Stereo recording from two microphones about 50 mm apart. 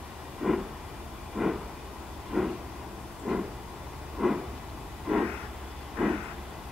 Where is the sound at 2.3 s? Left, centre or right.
Centre.